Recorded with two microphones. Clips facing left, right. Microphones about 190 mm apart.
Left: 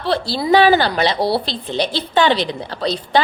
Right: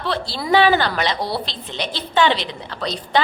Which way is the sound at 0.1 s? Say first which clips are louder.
Left 4 dB; 35° left (ahead or behind).